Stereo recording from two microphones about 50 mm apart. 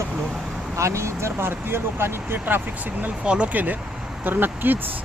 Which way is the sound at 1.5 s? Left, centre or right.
Right.